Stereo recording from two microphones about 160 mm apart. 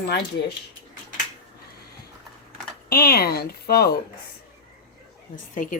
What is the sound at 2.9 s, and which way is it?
Speech, 70° left (ahead or behind).